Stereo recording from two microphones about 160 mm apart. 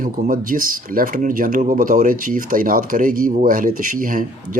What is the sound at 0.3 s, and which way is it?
Speech, 60° right (ahead or behind).